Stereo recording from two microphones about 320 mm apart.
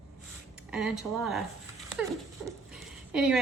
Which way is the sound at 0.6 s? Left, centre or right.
Centre.